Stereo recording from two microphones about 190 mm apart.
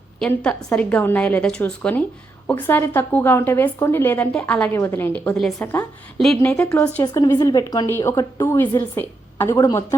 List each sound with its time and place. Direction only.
0.2 s a woman's voice: 5° left (ahead or behind)
7.0 s a woman's voice: 20° left (ahead or behind)